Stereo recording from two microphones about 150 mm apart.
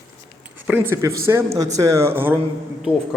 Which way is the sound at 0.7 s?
15° right (ahead or behind).